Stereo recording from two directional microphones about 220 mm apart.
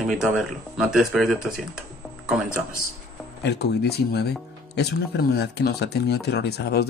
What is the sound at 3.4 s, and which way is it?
Speech, 50° left (ahead or behind).